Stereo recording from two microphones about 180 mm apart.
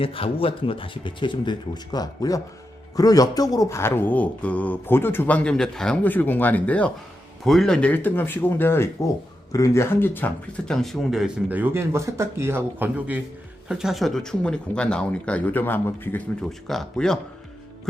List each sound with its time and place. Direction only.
0.0 s speech: 30° left (ahead or behind); by 17.2 s centre (ahead or behind)